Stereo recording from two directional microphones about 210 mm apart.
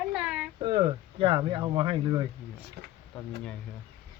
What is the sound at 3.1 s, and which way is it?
Speech, 5° left (ahead or behind).